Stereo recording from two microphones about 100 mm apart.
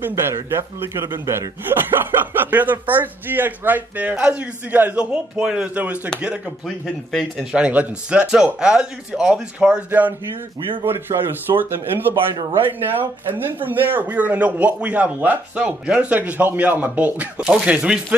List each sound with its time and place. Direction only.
0.0 s speech: 25° right (ahead or behind)
1.0 s a man's voice: 45° right (ahead or behind)
1.7 s speech: 20° right (ahead or behind)
7.1 s a man's voice: 5° left (ahead or behind)
7.5 s speech: 10° right (ahead or behind)